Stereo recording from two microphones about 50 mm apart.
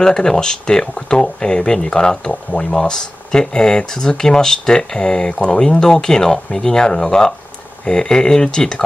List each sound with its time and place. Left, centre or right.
0.0 s speech: centre